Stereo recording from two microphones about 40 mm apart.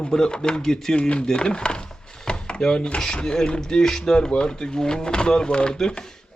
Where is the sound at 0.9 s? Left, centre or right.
Left.